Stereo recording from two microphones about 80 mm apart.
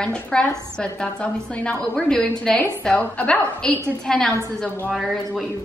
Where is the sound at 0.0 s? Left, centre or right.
Centre.